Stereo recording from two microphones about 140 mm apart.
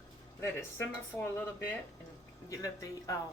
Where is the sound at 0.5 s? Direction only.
15° left (ahead or behind).